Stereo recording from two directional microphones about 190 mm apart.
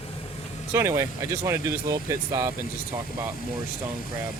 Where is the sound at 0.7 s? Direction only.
15° right (ahead or behind).